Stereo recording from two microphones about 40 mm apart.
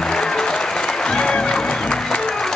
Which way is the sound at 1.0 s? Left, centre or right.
Left.